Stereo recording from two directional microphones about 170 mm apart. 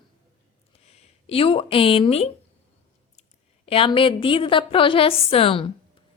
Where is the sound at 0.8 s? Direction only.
40° left (ahead or behind).